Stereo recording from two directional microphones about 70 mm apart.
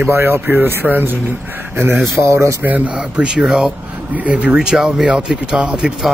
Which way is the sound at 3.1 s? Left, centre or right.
Centre.